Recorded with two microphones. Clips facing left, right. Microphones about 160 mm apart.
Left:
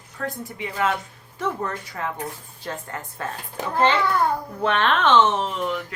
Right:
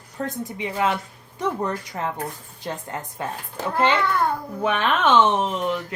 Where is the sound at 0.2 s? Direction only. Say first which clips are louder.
Right 2 dB; 25° right (ahead or behind).